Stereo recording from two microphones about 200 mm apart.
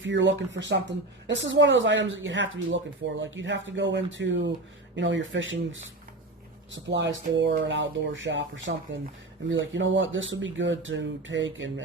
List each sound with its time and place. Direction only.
0.0 s speech: 65° right (ahead or behind)